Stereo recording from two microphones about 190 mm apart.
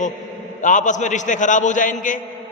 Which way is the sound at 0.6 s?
40° left (ahead or behind).